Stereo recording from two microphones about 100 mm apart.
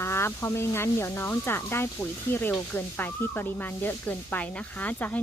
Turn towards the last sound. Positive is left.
turn(degrees=15)  # may be behind; listen again after turning